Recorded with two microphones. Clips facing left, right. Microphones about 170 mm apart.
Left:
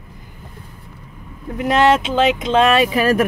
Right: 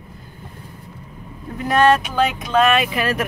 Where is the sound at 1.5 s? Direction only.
20° left (ahead or behind).